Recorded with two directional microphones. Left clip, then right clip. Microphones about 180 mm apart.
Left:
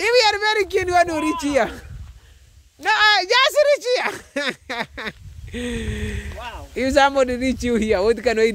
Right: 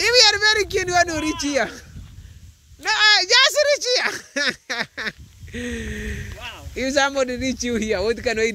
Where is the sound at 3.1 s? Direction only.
10° left (ahead or behind).